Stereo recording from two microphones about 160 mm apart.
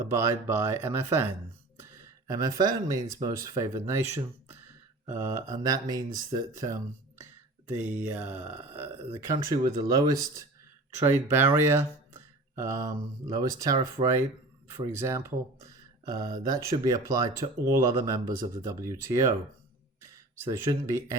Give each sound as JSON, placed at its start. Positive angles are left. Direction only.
{"t": 0.0, "sound": "speech", "side_deg": -15}
{"t": 14.0, "sound": "speech", "side_deg": -35}
{"t": 14.7, "sound": "speech", "side_deg": -15}